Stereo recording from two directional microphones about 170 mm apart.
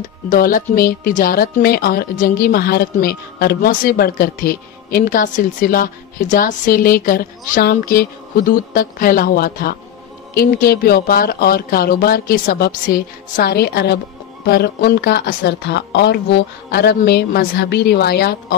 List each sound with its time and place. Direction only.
0.0 s a woman's voice: 55° left (ahead or behind)